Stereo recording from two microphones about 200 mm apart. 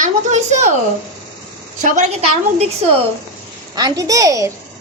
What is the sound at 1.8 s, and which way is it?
A woman's voice, 35° right (ahead or behind).